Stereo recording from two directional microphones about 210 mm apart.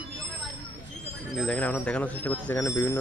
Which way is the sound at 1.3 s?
Centre (ahead or behind).